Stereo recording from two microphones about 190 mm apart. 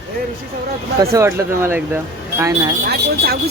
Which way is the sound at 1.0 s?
15° right (ahead or behind).